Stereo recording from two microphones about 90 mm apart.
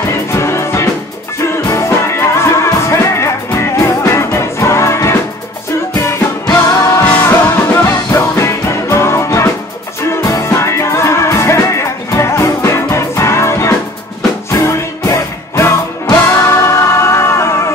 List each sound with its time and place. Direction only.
0.3 s music: 30° left (ahead or behind)
6.5 s music: 35° left (ahead or behind)
7.1 s music: 20° left (ahead or behind)